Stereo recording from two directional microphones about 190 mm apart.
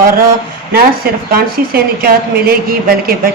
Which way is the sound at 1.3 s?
50° right (ahead or behind).